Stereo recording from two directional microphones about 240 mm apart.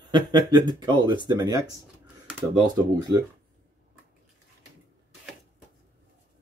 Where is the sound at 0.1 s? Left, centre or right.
Centre.